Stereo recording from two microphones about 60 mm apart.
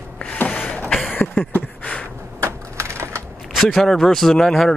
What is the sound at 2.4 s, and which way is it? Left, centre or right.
Typewriter, right.